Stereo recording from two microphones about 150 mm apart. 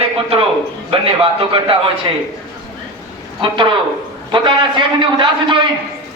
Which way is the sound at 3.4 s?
35° right (ahead or behind).